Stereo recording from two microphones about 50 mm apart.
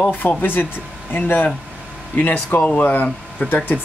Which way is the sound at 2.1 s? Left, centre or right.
Left.